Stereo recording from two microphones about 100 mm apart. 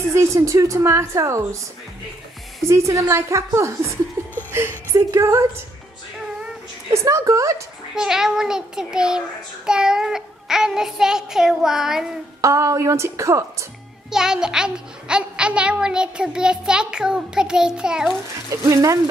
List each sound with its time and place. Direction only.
0.1 s a woman's voice: 30° right (ahead or behind)
2.6 s a woman's voice: 30° right (ahead or behind)
6.9 s a woman's voice: 30° right (ahead or behind)
7.9 s child singing: 5° right (ahead or behind)
12.4 s a woman's voice: 30° right (ahead or behind)
14.1 s a child's voice: 5° right (ahead or behind)
18.5 s a woman's voice: 35° right (ahead or behind)